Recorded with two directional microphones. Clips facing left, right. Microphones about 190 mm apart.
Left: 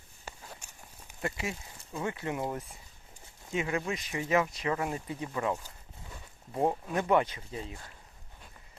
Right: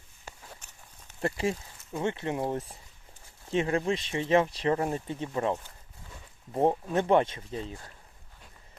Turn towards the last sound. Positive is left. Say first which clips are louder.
# right 4 dB
turn(degrees=-30)  # may be behind; listen again after turning